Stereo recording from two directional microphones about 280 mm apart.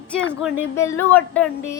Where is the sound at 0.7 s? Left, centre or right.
Centre.